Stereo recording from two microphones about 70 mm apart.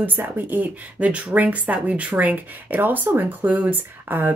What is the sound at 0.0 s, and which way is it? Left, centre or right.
Speech, right.